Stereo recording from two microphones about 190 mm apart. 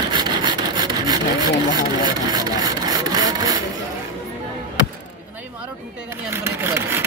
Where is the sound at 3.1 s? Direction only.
20° right (ahead or behind).